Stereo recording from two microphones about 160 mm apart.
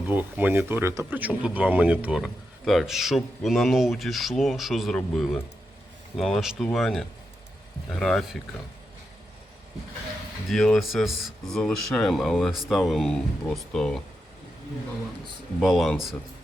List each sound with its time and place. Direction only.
0.1 s speech: 10° right (ahead or behind)
10.5 s speech: centre (ahead or behind)
15.6 s speech: centre (ahead or behind)